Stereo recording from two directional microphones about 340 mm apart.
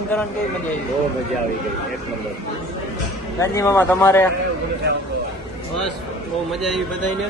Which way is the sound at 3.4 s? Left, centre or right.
Centre.